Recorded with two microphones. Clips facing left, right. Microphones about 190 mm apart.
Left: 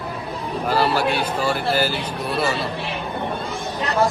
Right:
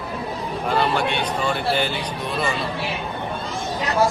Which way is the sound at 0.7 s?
5° left (ahead or behind).